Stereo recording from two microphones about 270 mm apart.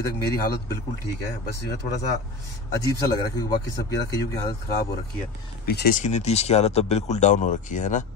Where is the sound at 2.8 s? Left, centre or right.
Centre.